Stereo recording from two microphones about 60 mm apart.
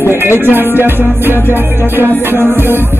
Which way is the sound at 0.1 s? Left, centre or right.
Right.